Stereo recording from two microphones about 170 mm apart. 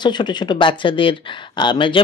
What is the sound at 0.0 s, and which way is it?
Speech, 25° left (ahead or behind).